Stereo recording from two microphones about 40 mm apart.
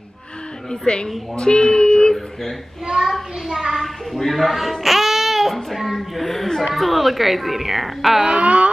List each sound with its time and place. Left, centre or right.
0.7 s a woman's voice: centre
3.0 s speech: centre
3.8 s babbling: centre
6.7 s speech: centre
8.3 s a sound: right